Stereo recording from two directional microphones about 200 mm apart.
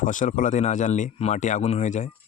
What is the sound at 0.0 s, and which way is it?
Speech, 40° left (ahead or behind).